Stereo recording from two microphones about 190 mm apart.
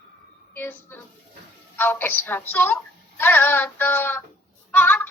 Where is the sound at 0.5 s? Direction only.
10° left (ahead or behind).